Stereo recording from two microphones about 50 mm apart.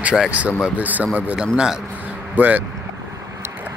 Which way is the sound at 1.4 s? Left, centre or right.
Centre.